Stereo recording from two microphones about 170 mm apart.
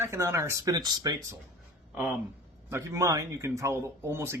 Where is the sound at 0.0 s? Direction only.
15° right (ahead or behind).